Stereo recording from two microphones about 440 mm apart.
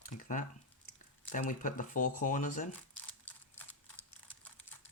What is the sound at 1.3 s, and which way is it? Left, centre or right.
Speech, centre.